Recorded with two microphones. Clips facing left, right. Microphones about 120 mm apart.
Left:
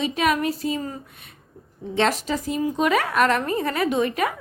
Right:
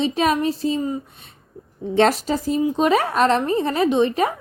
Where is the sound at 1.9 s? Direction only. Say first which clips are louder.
Right 5 dB; 40° right (ahead or behind).